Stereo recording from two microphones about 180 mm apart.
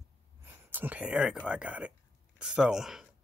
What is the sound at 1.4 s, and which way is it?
Speech, 5° right (ahead or behind).